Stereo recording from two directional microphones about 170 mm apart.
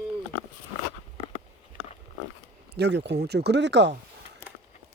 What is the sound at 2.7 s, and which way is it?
Speech, 80° right.